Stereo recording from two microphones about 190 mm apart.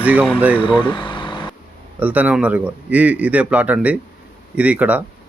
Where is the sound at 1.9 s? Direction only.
10° right (ahead or behind).